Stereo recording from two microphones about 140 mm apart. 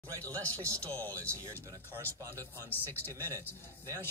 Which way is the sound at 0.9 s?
15° left (ahead or behind).